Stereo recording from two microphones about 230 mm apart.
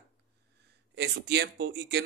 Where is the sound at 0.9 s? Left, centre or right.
Right.